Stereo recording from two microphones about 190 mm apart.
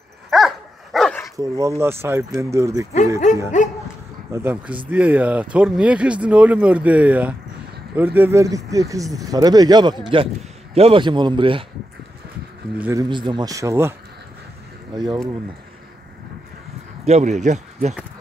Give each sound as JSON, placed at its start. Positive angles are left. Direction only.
{"t": 0.3, "sound": "dog", "side_deg": 0}
{"t": 1.3, "sound": "speech", "side_deg": -15}
{"t": 3.5, "sound": "speech", "side_deg": 40}
{"t": 4.3, "sound": "a man's voice", "side_deg": -10}
{"t": 12.7, "sound": "speech", "side_deg": -10}
{"t": 13.1, "sound": "a man's voice", "side_deg": -25}
{"t": 17.0, "sound": "speech", "side_deg": -35}